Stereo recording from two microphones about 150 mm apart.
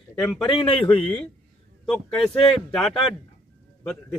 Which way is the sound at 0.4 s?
30° left (ahead or behind).